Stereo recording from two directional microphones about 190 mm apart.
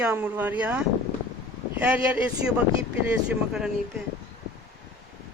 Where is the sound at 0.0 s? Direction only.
10° right (ahead or behind).